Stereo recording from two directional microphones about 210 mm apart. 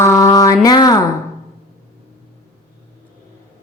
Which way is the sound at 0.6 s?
20° left (ahead or behind).